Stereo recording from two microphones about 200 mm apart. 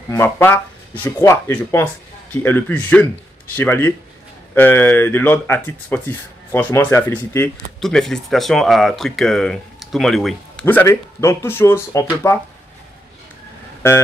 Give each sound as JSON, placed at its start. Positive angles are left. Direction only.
{"t": 0.1, "sound": "speech", "side_deg": 10}
{"t": 10.6, "sound": "speech", "side_deg": 10}
{"t": 13.8, "sound": "speech", "side_deg": 10}